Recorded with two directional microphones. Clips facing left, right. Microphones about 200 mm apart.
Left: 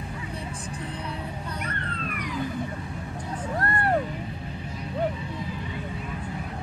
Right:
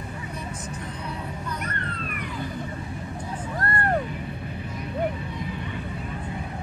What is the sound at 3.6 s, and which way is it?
Music, 25° left (ahead or behind).